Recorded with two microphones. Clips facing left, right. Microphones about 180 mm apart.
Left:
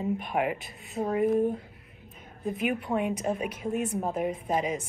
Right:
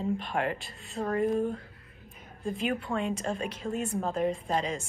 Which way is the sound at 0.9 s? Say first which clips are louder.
Left 3 dB; 20° left (ahead or behind).